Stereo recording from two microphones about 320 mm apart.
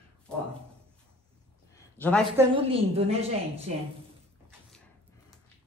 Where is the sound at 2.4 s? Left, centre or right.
Centre.